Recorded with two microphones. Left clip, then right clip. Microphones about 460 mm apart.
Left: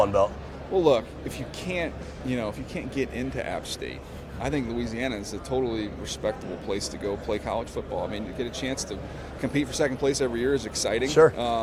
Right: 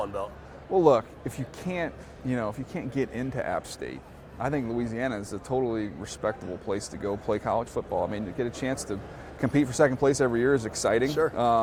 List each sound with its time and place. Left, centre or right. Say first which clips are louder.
0.0 s a man's voice: left 11 dB; left
0.7 s a man's voice: right 1 dB; right
8.1 s speech: even; right
11.1 s speech: left 8 dB; left
11.3 s speech: right 4 dB; right